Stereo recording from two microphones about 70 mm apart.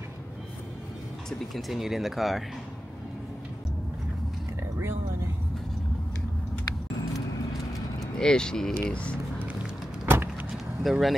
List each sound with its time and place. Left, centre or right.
1.5 s speech: centre
8.2 s speech: centre
10.0 s vehicle: right
10.5 s vehicle: centre